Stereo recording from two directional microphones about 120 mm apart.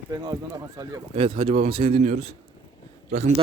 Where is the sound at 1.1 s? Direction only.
45° right (ahead or behind).